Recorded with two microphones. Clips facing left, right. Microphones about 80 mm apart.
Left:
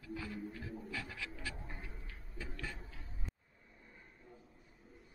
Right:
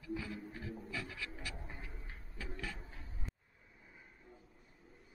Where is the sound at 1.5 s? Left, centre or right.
Centre.